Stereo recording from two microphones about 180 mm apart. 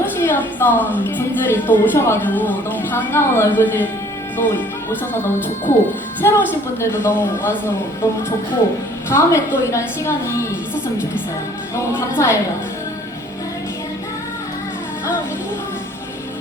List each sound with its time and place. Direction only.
0.0 s a sound: 10° left (ahead or behind)
1.0 s speech: 10° left (ahead or behind)
11.9 s speech: 15° left (ahead or behind)